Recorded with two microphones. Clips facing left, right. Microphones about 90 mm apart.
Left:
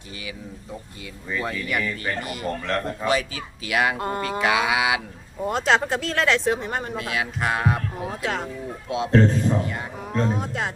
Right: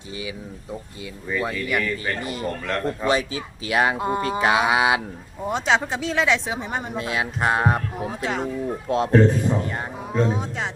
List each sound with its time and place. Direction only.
1.3 s speech: 5° right (ahead or behind)
2.2 s speech: 30° right (ahead or behind)
2.5 s speech: centre (ahead or behind)
3.1 s speech: 30° right (ahead or behind)
3.9 s a man's voice: 15° right (ahead or behind)
4.2 s speech: 30° right (ahead or behind)
5.5 s speech: centre (ahead or behind)
6.9 s speech: 25° right (ahead or behind)
8.0 s a man's voice: centre (ahead or behind)